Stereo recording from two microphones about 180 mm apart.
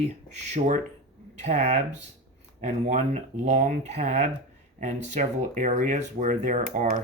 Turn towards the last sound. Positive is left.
turn(degrees=-45)  # may be behind; listen again after turning